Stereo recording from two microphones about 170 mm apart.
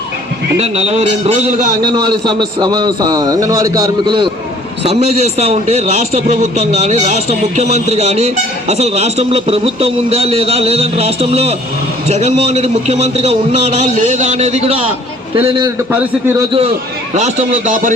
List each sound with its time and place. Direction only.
0.6 s a man's voice: 40° right (ahead or behind)
1.8 s a man's voice: 25° right (ahead or behind)
4.8 s a man's voice: 40° right (ahead or behind)
17.2 s speech: 45° right (ahead or behind)